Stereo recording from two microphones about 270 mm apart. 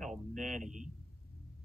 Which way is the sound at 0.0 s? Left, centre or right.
Right.